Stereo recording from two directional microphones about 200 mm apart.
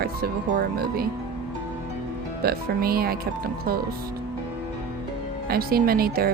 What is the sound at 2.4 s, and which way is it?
A woman's voice, 50° right (ahead or behind).